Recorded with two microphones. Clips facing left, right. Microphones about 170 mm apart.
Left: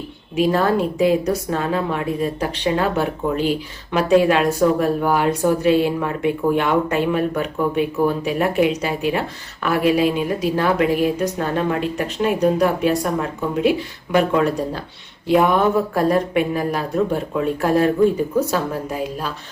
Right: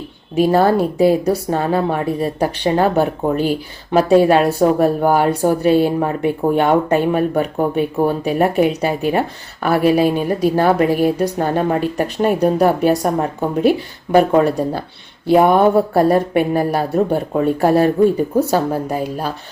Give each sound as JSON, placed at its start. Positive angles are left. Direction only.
{"t": 0.3, "sound": "speech", "side_deg": -35}